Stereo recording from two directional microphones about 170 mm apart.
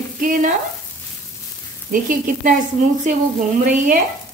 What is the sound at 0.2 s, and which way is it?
Stir, 50° right (ahead or behind).